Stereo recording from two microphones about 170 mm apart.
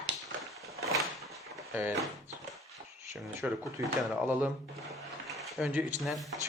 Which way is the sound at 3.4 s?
10° right (ahead or behind).